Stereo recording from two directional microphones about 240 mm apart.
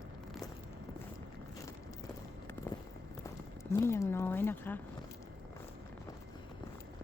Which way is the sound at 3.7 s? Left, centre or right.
Centre.